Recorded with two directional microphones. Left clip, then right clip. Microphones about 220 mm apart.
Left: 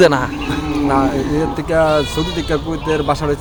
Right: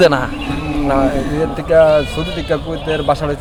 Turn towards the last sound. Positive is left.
turn(degrees=0)  # may be behind; listen again after turning